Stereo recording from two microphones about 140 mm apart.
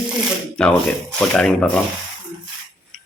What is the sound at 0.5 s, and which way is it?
Speech, 5° left (ahead or behind).